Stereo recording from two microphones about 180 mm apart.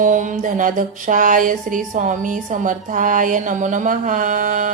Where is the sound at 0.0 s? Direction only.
45° right (ahead or behind).